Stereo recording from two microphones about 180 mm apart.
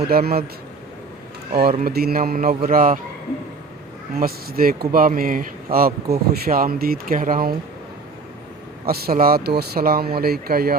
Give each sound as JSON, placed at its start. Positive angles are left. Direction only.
{"t": 0.1, "sound": "speech", "side_deg": -60}
{"t": 1.8, "sound": "speech", "side_deg": -60}
{"t": 4.2, "sound": "speech", "side_deg": -55}
{"t": 8.9, "sound": "speech", "side_deg": -55}